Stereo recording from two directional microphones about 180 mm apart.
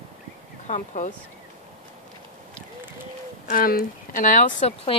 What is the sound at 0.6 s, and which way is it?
Speech, 40° left (ahead or behind).